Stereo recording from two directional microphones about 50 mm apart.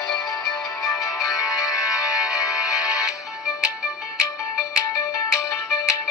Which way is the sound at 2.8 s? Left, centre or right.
Right.